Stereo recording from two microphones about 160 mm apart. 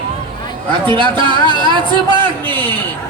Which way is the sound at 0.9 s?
30° right (ahead or behind).